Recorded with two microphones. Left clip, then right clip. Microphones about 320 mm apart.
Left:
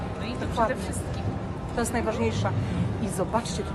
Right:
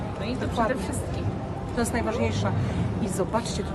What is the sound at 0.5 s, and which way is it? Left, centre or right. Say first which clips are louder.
A woman's voice: left 1 dB; centre.